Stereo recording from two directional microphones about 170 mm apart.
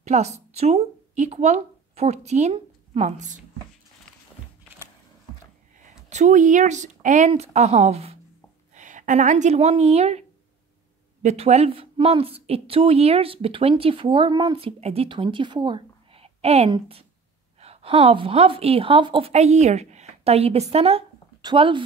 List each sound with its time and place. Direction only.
0.0 s speech: 40° right (ahead or behind)
6.0 s a woman's voice: 45° right (ahead or behind)
11.2 s a woman's voice: 40° right (ahead or behind)